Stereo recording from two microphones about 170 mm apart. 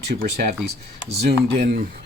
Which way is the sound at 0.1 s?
75° right (ahead or behind).